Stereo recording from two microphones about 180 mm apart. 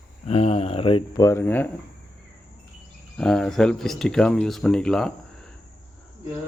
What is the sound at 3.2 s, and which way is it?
Speech, 5° left (ahead or behind).